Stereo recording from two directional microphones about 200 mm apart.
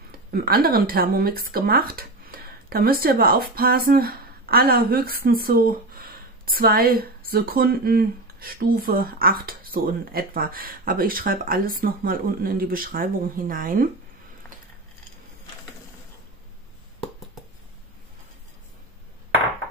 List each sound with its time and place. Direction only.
0.3 s speech: 50° right (ahead or behind)